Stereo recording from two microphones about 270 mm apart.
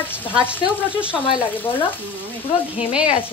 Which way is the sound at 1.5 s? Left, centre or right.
Centre.